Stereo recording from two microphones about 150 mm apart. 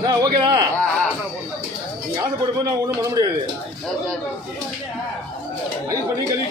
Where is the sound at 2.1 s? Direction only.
25° right (ahead or behind).